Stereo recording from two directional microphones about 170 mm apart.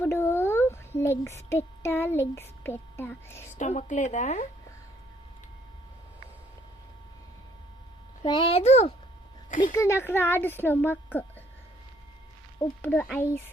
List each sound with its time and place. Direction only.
0.0 s a sound: 15° left (ahead or behind)
1.5 s a child's voice: 15° left (ahead or behind)
3.6 s speech: 45° left (ahead or behind)
8.2 s a child's voice: 30° left (ahead or behind)
9.7 s a child's voice: 15° left (ahead or behind)
12.8 s a child's voice: 10° left (ahead or behind)